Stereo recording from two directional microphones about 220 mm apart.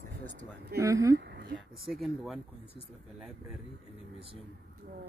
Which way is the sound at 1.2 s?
50° right (ahead or behind).